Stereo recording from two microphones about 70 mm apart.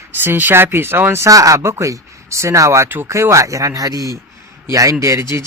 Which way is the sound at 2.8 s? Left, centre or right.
Right.